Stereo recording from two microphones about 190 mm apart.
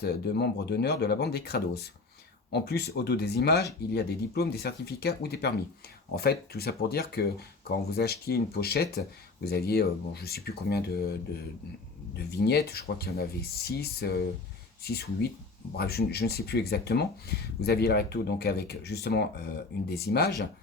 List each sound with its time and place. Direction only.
0.0 s speech: 60° left (ahead or behind)
12.3 s speech: 60° left (ahead or behind)